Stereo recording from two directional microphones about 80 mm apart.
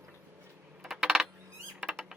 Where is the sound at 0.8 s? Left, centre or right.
Centre.